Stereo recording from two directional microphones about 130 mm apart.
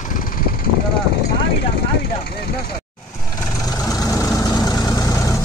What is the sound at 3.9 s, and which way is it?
Vehicle, 25° left (ahead or behind).